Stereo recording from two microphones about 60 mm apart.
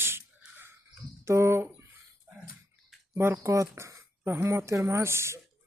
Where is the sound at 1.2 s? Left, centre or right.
Right.